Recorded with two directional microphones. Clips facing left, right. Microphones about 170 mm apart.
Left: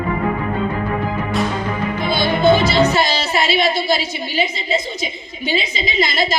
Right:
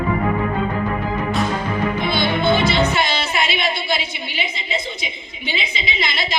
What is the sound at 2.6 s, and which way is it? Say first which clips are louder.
A woman's voice: left 3 dB; 40° left (ahead or behind).